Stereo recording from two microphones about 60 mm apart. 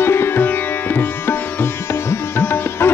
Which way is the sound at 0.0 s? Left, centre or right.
Left.